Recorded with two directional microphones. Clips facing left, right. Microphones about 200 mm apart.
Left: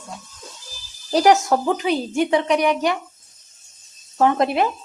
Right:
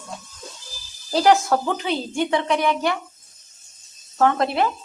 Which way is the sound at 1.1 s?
20° left (ahead or behind).